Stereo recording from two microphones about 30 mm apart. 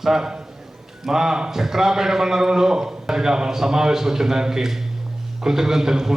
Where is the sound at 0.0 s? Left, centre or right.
Centre.